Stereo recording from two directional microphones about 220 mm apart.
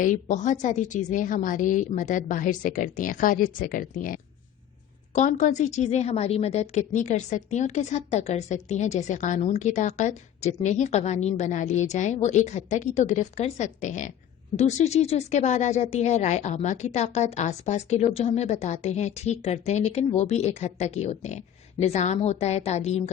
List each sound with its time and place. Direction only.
0.0 s a woman's voice: 35° left (ahead or behind)